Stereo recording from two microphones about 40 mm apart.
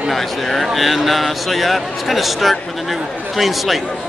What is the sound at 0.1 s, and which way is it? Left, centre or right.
A man's voice, centre.